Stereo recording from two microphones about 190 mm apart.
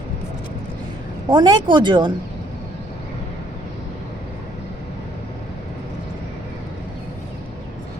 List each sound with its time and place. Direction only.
1.3 s speech: 25° right (ahead or behind)